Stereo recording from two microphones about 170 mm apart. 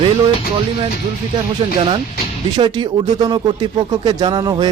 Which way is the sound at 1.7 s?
30° right (ahead or behind).